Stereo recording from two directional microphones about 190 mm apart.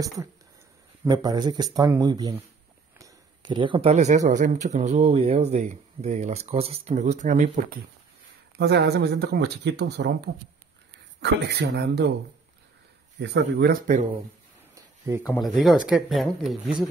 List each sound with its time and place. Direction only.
1.0 s speech: 20° right (ahead or behind)
3.0 s a sound: 25° right (ahead or behind)
4.3 s speech: 40° right (ahead or behind)
8.5 s speech: 60° right (ahead or behind)
13.2 s speech: 65° right (ahead or behind); by 14.0 s 50° right (ahead or behind)
15.0 s speech: 10° right (ahead or behind)
15.4 s speech: centre (ahead or behind)